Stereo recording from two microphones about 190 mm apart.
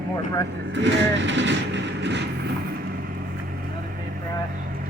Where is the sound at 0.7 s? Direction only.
70° right (ahead or behind).